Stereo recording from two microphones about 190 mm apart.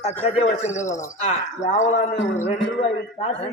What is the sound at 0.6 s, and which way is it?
A man's voice, 40° left (ahead or behind).